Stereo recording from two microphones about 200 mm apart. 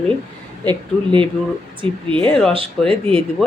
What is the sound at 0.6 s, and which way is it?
Speech, 25° right (ahead or behind).